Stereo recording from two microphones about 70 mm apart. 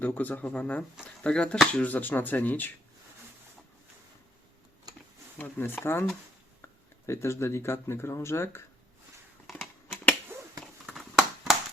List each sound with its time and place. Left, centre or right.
0.0 s speech: left
5.4 s speech: left
7.1 s speech: left
9.5 s a sound: centre